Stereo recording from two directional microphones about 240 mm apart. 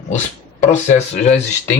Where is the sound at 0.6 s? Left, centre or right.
Left.